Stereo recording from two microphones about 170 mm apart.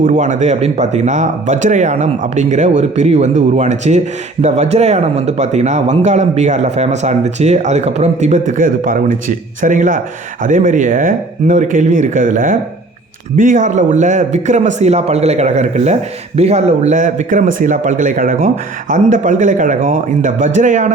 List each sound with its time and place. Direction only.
0.0 s speech: 45° right (ahead or behind)